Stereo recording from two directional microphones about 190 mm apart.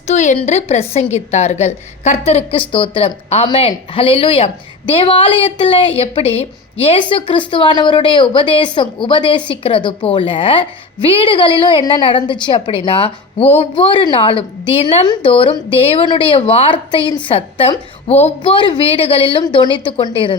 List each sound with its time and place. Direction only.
0.1 s a woman's voice: 40° left (ahead or behind)